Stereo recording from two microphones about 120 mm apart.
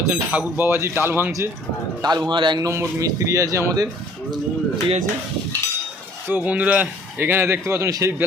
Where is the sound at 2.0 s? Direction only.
35° right (ahead or behind).